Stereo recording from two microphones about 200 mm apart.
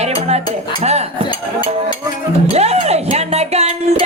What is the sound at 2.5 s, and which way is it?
Speech, 30° right (ahead or behind).